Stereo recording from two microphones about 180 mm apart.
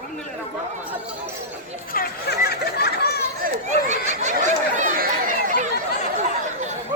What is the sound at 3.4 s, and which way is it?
Chatter, 40° right (ahead or behind).